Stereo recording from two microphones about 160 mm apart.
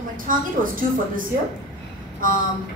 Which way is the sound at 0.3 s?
60° right (ahead or behind).